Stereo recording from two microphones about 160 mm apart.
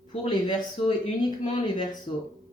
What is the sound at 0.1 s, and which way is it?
Speech, 30° left (ahead or behind).